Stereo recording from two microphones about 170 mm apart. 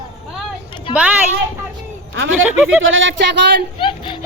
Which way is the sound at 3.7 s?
30° left (ahead or behind).